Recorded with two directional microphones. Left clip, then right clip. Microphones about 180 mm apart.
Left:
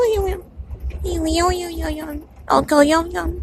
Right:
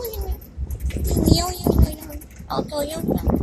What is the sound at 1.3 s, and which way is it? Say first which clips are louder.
Speech: left 3 dB; 55° left (ahead or behind).